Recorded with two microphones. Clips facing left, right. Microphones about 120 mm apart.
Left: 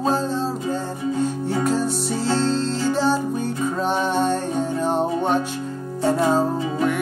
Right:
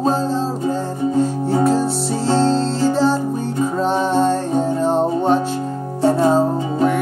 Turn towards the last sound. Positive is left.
turn(degrees=-35)  # may be behind; listen again after turning